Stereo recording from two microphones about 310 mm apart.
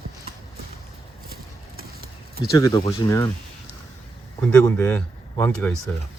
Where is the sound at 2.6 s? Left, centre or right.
Centre.